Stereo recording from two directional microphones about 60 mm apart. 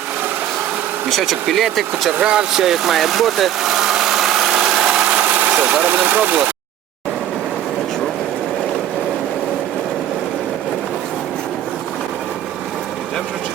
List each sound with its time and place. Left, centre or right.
1.1 s speech: centre
2.2 s speech: centre
5.1 s vehicle: right